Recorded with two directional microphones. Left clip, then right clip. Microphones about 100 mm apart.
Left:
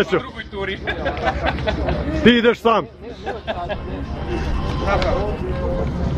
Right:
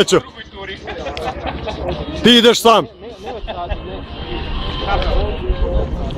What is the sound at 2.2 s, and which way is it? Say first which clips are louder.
Speech: right 5 dB; 50° right (ahead or behind).